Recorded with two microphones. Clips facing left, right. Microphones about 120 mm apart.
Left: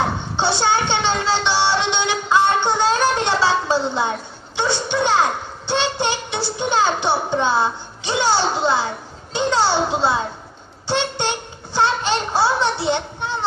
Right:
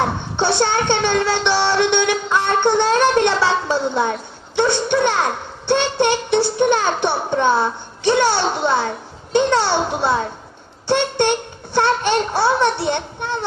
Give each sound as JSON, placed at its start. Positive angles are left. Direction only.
{"t": 0.4, "sound": "music", "side_deg": -55}
{"t": 4.5, "sound": "a child's voice", "side_deg": -60}
{"t": 9.3, "sound": "a sound", "side_deg": -55}